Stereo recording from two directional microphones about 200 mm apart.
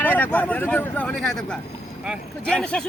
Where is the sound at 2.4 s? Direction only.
5° left (ahead or behind).